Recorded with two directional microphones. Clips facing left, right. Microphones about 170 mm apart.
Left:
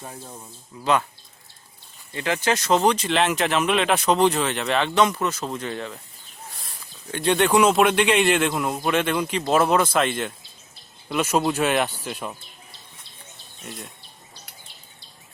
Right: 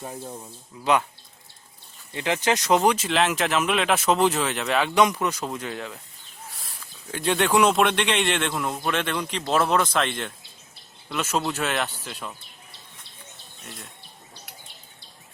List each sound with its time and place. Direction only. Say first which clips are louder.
0.0 s speech: right 3 dB; 10° right (ahead or behind)
2.1 s speech: even; 15° right (ahead or behind)
7.1 s a man's voice: left 3 dB; centre (ahead or behind); by 12.4 s 20° left (ahead or behind)